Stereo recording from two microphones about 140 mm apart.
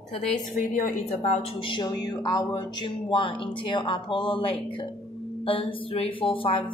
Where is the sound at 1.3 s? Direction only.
40° left (ahead or behind).